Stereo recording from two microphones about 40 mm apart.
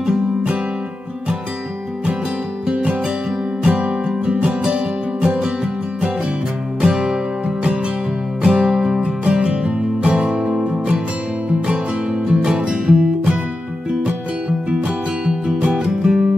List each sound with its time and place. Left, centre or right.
2.7 s music: right
6.8 s music: centre
15.4 s music: right